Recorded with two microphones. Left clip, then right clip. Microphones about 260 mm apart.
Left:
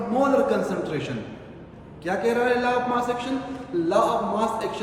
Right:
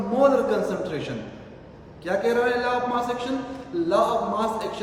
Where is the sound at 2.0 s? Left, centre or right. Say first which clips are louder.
Even; centre.